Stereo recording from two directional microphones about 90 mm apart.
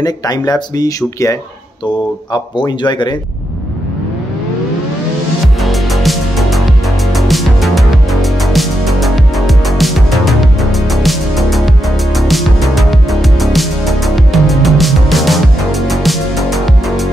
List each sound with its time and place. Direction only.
0.0 s speech: 45° left (ahead or behind)
2.3 s a man's voice: 55° left (ahead or behind)
5.6 s music: centre (ahead or behind)